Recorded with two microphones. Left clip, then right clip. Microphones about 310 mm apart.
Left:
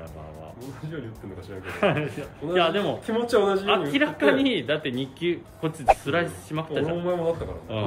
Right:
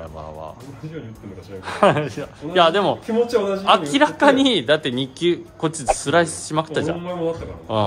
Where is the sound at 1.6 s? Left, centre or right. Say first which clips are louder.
Right 8 dB; centre.